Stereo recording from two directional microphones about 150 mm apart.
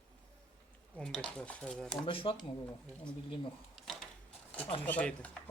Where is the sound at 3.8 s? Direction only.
Centre (ahead or behind).